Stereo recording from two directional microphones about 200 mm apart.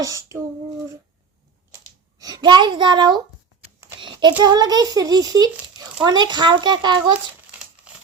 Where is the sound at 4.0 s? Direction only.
25° right (ahead or behind).